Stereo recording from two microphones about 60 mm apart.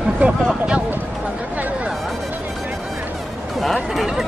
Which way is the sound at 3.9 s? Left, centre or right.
Centre.